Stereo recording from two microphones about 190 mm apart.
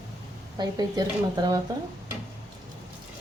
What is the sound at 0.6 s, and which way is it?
Speech, 20° right (ahead or behind).